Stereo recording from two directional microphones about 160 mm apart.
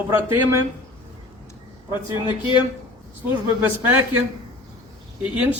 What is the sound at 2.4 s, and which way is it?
Speech, 30° left (ahead or behind).